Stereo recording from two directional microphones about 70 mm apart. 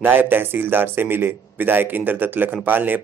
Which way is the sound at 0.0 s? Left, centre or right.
Right.